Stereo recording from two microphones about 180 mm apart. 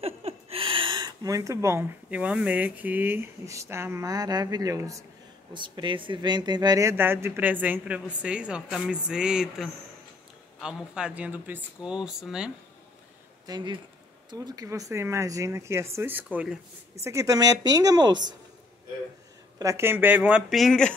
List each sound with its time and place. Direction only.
0.0 s speech: 35° right (ahead or behind); by 12.4 s 5° right (ahead or behind)
13.5 s speech: 25° right (ahead or behind)
19.6 s speech: 15° right (ahead or behind); by 20.9 s centre (ahead or behind)